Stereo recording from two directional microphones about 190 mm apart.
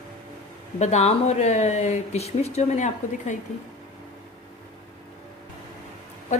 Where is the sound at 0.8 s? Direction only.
35° left (ahead or behind).